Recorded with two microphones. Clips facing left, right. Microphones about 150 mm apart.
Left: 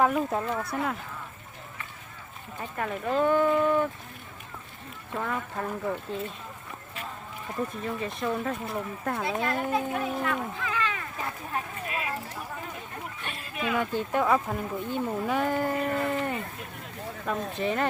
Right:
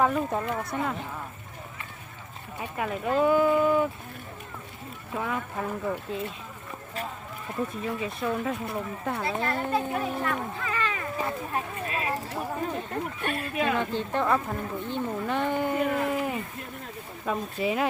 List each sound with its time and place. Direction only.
0.0 s speech: 5° left (ahead or behind)
2.6 s speech: 10° right (ahead or behind)
5.1 s speech: 5° right (ahead or behind)
7.7 s speech: 5° right (ahead or behind)
11.9 s a sound: 40° right (ahead or behind)
13.2 s a sound: 60° right (ahead or behind)
13.7 s speech: 10° left (ahead or behind)